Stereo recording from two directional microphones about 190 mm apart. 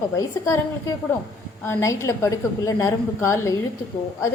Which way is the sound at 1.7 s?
15° left (ahead or behind).